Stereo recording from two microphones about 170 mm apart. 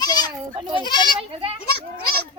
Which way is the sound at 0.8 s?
25° left (ahead or behind).